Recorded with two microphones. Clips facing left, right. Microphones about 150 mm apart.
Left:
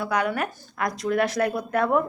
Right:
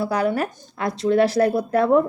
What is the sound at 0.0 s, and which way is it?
Speech, 30° right (ahead or behind).